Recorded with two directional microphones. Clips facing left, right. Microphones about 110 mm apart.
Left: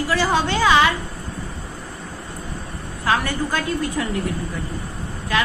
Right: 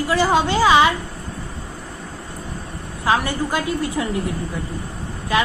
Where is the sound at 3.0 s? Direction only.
15° right (ahead or behind).